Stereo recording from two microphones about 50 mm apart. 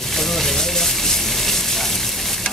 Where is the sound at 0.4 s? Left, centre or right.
Centre.